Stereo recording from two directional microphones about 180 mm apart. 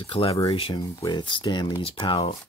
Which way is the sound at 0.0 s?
30° left (ahead or behind).